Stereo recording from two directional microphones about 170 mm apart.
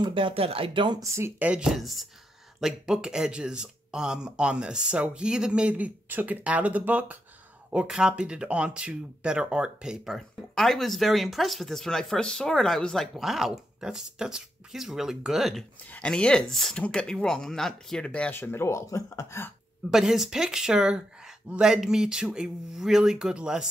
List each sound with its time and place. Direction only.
0.0 s speech: 30° right (ahead or behind); by 19.5 s 15° left (ahead or behind)
19.9 s speech: 5° right (ahead or behind)